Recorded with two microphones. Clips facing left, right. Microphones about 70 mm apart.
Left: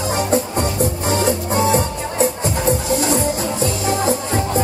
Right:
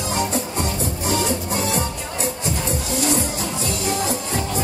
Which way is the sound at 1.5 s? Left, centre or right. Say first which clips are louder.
Left 7 dB; left.